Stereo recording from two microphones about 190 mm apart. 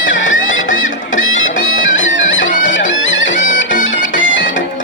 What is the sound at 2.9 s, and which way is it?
Bagpipes, 80° left.